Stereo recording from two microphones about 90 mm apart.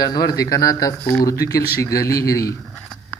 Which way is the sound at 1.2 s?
40° left (ahead or behind).